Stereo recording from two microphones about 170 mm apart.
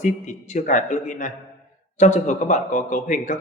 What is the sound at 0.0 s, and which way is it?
A man's voice, 45° left (ahead or behind).